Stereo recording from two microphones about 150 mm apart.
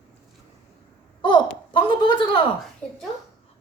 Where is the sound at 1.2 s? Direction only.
30° left (ahead or behind).